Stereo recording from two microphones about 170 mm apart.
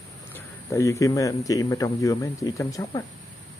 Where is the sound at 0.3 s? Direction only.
15° left (ahead or behind).